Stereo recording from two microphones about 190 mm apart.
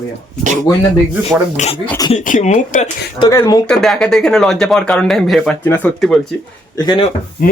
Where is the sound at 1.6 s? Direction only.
40° left (ahead or behind).